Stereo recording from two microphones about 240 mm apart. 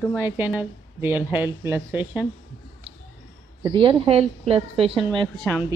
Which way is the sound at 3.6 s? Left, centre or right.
Right.